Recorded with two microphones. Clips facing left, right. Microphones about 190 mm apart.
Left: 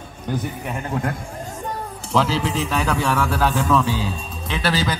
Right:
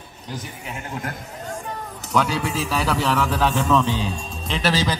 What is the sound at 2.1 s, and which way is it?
A man's voice, 25° left (ahead or behind).